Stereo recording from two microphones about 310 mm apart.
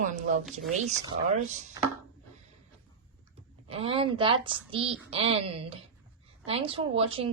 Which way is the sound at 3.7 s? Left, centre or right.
Centre.